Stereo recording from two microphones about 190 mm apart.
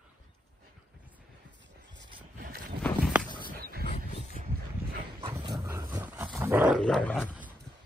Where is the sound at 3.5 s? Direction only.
50° right (ahead or behind).